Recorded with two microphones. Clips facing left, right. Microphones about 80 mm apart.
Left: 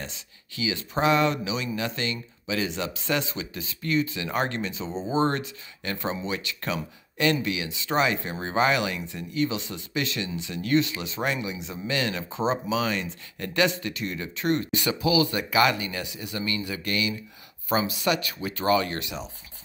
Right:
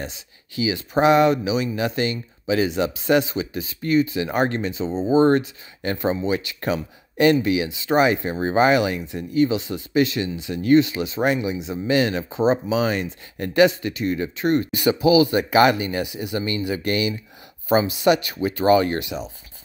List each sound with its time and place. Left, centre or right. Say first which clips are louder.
0.0 s speech: right 6 dB; centre
15.3 s speech: right 6 dB; right